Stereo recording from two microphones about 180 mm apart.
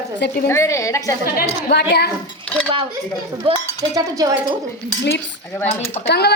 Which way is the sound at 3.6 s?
20° right (ahead or behind).